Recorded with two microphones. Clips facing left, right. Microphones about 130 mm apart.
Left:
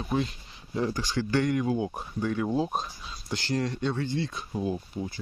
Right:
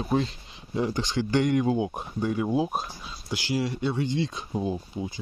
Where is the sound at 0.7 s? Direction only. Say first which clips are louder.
Right 2 dB; 20° right (ahead or behind).